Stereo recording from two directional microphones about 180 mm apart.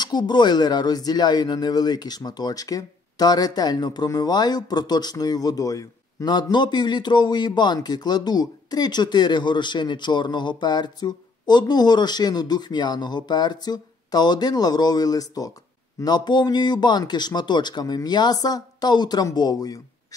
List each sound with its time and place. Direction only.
0.0 s speech: 25° left (ahead or behind)